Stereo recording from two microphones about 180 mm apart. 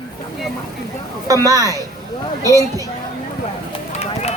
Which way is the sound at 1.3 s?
20° right (ahead or behind).